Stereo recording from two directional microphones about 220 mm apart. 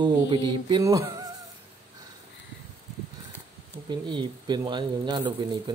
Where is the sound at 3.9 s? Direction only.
20° right (ahead or behind).